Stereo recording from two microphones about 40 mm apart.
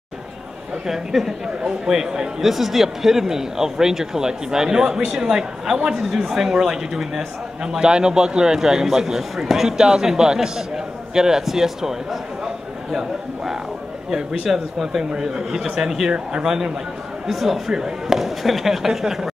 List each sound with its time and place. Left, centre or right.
0.8 s speech: centre
5.9 s speech: centre
14.1 s speech: centre
16.1 s speech: right
17.3 s speech: centre